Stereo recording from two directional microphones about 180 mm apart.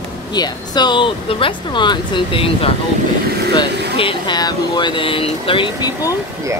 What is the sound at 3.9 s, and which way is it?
Speech, 25° left (ahead or behind).